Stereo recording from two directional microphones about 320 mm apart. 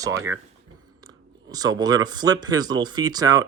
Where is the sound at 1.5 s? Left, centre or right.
Centre.